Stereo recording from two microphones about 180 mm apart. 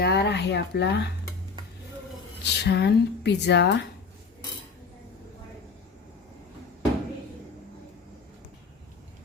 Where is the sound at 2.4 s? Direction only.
70° left (ahead or behind).